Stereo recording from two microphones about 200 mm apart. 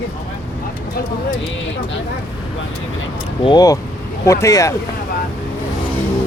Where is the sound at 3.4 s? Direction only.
20° left (ahead or behind).